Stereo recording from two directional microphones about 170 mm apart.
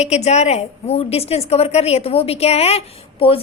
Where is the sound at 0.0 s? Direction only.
40° left (ahead or behind).